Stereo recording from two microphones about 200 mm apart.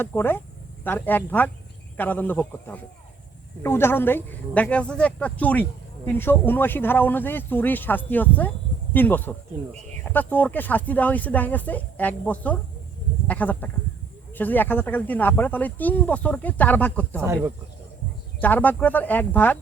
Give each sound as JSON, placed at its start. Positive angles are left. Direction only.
{"t": 0.0, "sound": "speech", "side_deg": 10}
{"t": 17.2, "sound": "speech", "side_deg": -15}
{"t": 18.3, "sound": "speech", "side_deg": 10}